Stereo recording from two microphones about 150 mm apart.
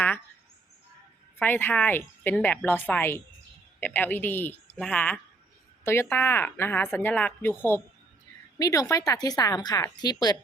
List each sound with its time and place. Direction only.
1.4 s a woman's voice: 15° left (ahead or behind)
8.5 s speech: 25° left (ahead or behind)